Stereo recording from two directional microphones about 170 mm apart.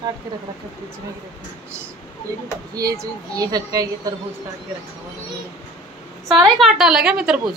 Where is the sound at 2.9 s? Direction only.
20° right (ahead or behind).